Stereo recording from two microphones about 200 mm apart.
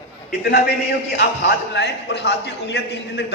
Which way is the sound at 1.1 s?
55° left (ahead or behind).